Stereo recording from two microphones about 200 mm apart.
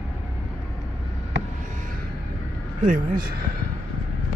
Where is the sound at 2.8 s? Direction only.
45° right (ahead or behind).